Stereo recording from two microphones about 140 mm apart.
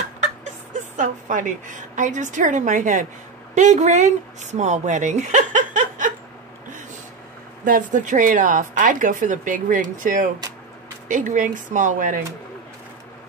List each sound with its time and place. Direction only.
0.9 s speech: 65° right (ahead or behind)
7.6 s speech: 70° right (ahead or behind)